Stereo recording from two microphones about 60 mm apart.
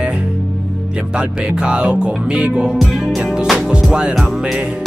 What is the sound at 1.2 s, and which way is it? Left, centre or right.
Music, centre.